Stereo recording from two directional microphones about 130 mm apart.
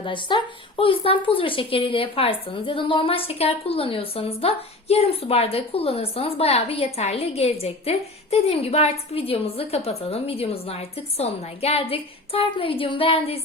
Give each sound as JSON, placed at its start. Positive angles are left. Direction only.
{"t": 0.0, "sound": "a woman's voice", "side_deg": 40}